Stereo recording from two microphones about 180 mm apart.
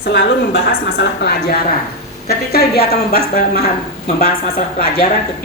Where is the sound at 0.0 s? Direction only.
75° left (ahead or behind); by 3.2 s 55° left (ahead or behind).